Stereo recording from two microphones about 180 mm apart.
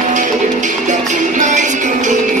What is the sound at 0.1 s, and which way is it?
Music, 45° right (ahead or behind).